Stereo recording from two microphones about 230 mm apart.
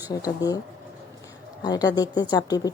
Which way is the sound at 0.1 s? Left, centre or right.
Centre.